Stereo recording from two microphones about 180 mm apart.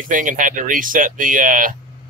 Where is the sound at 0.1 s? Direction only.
45° right (ahead or behind).